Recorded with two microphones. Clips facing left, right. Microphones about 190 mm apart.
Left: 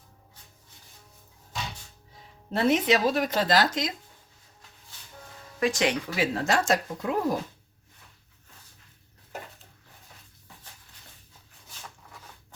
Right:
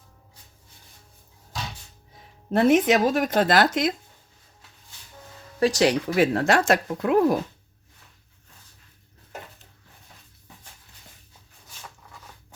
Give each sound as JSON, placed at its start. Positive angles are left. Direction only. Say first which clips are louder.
{"t": 2.5, "sound": "speech", "louder": "right 5 dB", "side_deg": -50}
{"t": 5.5, "sound": "speech", "louder": "right 5 dB", "side_deg": -35}
{"t": 6.1, "sound": "speech", "louder": "right 6 dB", "side_deg": -55}